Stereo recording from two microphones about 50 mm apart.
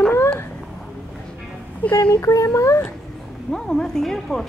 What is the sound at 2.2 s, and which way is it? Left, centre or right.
Speech, left.